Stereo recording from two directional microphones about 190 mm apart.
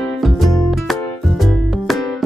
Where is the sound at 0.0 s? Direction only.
Centre (ahead or behind).